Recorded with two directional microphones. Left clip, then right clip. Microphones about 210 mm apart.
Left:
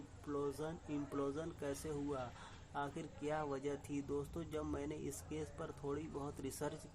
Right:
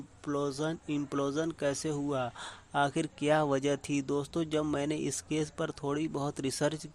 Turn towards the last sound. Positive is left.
turn(degrees=-40)  # may be behind; listen again after turning